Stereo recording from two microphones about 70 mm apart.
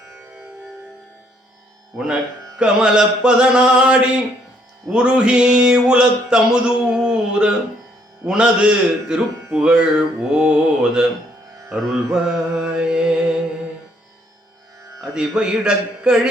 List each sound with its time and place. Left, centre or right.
1.9 s speech: right
5.6 s a sound: centre
8.3 s speech: centre
12.1 s music: centre
15.0 s speech: centre